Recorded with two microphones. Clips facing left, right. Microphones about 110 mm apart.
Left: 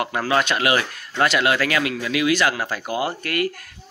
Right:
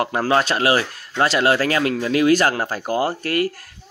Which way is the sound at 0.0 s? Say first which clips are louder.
Right 3 dB; 35° right (ahead or behind).